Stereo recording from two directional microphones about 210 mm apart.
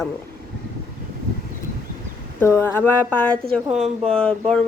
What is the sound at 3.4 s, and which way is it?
Speech, 30° right (ahead or behind).